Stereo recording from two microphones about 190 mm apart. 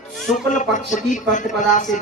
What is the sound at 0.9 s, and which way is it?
Speech, 40° left (ahead or behind).